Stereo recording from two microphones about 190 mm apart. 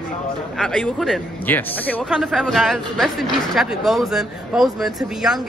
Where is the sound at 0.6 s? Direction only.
5° left (ahead or behind).